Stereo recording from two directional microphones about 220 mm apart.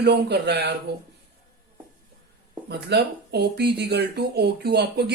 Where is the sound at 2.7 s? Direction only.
50° right (ahead or behind).